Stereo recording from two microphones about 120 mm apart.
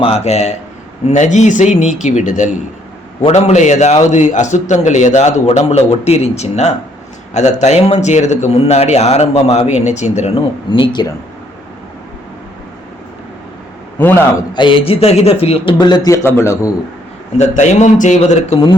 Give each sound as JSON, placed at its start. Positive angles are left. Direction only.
{"t": 0.0, "sound": "speech", "side_deg": 60}
{"t": 1.0, "sound": "speech", "side_deg": 85}
{"t": 3.2, "sound": "a man's voice", "side_deg": 65}
{"t": 10.7, "sound": "speech", "side_deg": 45}
{"t": 14.0, "sound": "a man's voice", "side_deg": 15}
{"t": 14.5, "sound": "speech", "side_deg": 45}
{"t": 15.8, "sound": "a man's voice", "side_deg": 30}
{"t": 17.3, "sound": "a man's voice", "side_deg": 80}